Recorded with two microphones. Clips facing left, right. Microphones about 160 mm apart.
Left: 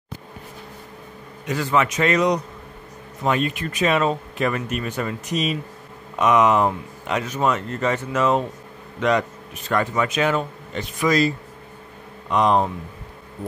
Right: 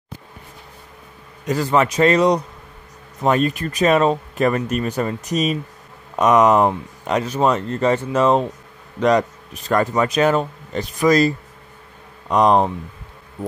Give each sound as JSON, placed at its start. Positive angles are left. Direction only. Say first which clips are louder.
{"t": 1.4, "sound": "speech", "louder": "right 3 dB", "side_deg": -40}